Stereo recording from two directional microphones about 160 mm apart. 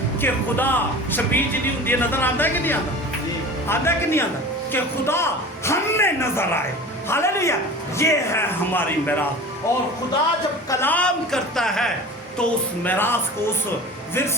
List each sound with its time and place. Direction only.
0.2 s a man's voice: 10° left (ahead or behind)